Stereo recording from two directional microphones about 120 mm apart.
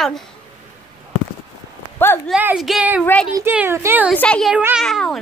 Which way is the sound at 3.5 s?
20° right (ahead or behind).